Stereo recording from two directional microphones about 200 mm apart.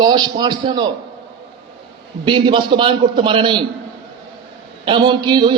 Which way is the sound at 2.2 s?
25° right (ahead or behind).